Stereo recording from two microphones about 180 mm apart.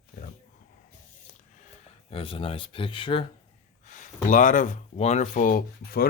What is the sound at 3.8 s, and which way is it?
Speech, 45° left (ahead or behind).